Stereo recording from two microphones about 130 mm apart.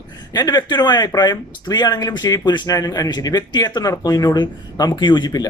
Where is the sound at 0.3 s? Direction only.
30° left (ahead or behind).